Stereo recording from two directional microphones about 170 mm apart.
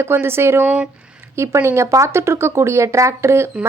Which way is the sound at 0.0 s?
15° right (ahead or behind).